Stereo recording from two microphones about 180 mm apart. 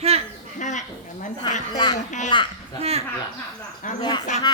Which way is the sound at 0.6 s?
40° left (ahead or behind).